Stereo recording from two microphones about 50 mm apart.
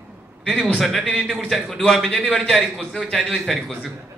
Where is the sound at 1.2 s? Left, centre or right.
Centre.